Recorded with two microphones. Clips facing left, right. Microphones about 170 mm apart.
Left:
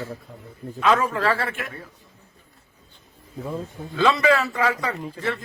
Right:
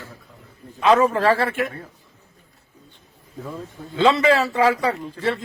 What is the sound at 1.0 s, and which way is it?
Speech, 40° right (ahead or behind).